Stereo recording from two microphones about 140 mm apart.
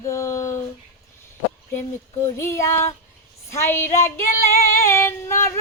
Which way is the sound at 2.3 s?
20° left (ahead or behind).